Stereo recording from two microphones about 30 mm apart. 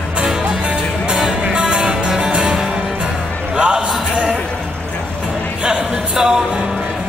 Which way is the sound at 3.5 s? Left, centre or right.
Right.